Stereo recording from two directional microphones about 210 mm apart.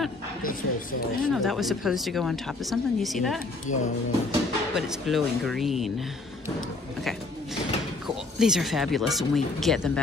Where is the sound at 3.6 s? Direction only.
35° left (ahead or behind).